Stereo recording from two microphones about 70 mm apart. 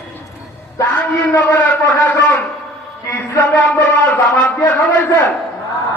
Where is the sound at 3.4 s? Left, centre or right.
Left.